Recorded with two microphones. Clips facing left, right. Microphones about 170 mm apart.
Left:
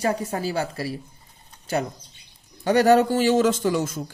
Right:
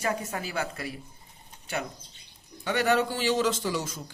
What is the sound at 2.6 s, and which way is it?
Speech, 40° left (ahead or behind).